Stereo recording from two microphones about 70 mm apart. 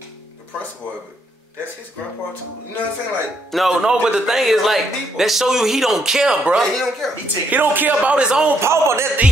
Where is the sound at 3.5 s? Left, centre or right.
Centre.